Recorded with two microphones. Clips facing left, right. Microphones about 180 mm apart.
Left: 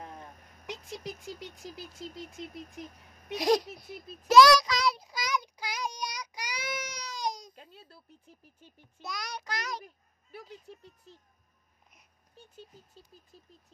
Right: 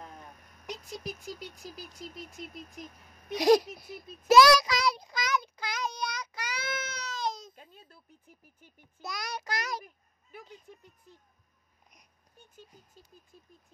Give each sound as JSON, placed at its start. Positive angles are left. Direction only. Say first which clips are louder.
{"t": 0.8, "sound": "rodents", "louder": "right 1 dB", "side_deg": 30}
{"t": 3.3, "sound": "speech", "louder": "right 4 dB", "side_deg": 0}
{"t": 4.3, "sound": "child singing", "louder": "even", "side_deg": -5}
{"t": 9.0, "sound": "child singing", "louder": "right 2 dB", "side_deg": -5}